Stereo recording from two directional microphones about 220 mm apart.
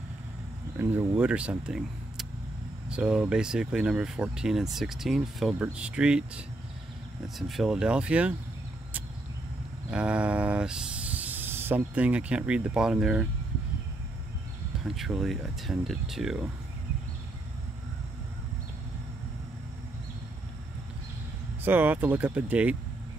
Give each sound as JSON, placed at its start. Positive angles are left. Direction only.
{"t": 0.7, "sound": "speech", "side_deg": -10}
{"t": 9.8, "sound": "speech", "side_deg": -5}
{"t": 15.0, "sound": "speech", "side_deg": 0}
{"t": 21.6, "sound": "speech", "side_deg": -10}